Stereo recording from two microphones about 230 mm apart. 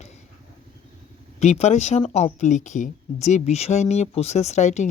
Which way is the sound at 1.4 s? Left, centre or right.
Left.